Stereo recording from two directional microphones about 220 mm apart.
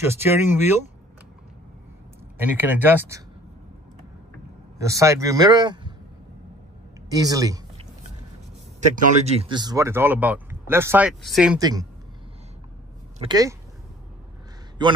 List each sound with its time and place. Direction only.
0.0 s speech: 10° right (ahead or behind)
2.3 s speech: 10° right (ahead or behind)
4.7 s speech: 15° right (ahead or behind)
7.1 s speech: 15° right (ahead or behind)
8.9 s speech: 30° right (ahead or behind); by 11.6 s centre (ahead or behind)
11.6 s speech: 15° right (ahead or behind)
13.2 s speech: 15° right (ahead or behind)
14.8 s a man's voice: 20° right (ahead or behind)